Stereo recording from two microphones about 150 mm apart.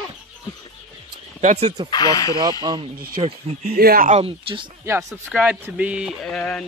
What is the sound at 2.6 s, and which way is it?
Speech, 30° right (ahead or behind).